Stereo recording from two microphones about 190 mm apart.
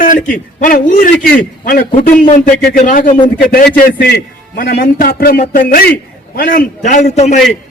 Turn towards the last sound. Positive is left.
turn(degrees=35)  # may be behind; listen again after turning